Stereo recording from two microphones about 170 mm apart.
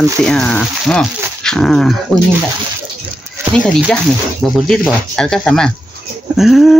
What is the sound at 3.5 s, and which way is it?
Speech, 5° left (ahead or behind).